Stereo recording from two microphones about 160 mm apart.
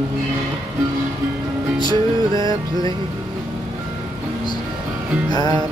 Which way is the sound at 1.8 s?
25° left (ahead or behind).